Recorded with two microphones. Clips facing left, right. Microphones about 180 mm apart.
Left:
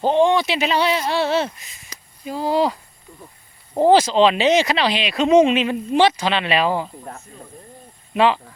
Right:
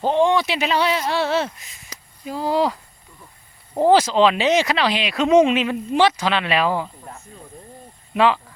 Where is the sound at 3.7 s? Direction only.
20° left (ahead or behind).